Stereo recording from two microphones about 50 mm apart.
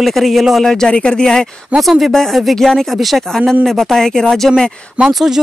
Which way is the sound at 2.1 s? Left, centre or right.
Centre.